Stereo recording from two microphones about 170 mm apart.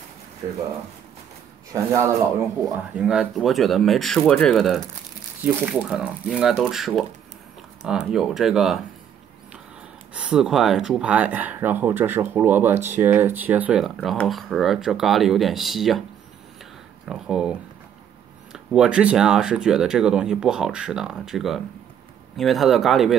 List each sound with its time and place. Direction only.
1.7 s speech: 15° right (ahead or behind)
3.0 s speech: centre (ahead or behind)
10.1 s speech: 5° right (ahead or behind)
17.1 s speech: 5° right (ahead or behind)